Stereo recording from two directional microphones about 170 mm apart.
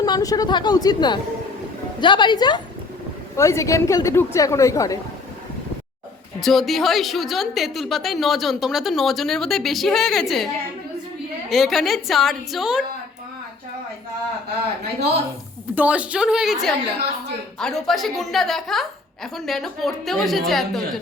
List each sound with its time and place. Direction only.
0.0 s a woman's voice: 20° left (ahead or behind)
6.4 s a woman's voice: centre (ahead or behind)
15.7 s a woman's voice: 10° right (ahead or behind)